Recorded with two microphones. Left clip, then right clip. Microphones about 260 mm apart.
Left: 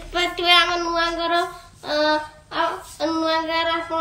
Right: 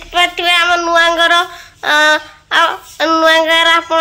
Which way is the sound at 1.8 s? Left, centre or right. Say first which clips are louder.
Right 10 dB; centre.